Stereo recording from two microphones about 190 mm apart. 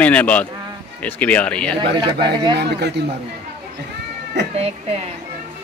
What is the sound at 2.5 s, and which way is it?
Speech, 60° right (ahead or behind).